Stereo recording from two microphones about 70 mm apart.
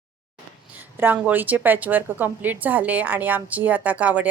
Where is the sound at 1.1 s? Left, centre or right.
Right.